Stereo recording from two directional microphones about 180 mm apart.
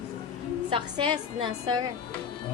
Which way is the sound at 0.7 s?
25° right (ahead or behind).